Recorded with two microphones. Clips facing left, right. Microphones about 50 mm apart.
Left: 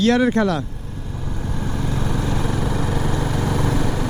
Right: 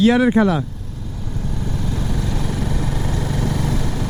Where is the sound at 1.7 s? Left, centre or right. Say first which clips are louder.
Left 2 dB; left.